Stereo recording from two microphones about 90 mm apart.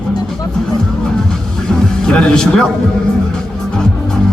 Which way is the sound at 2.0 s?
10° left (ahead or behind).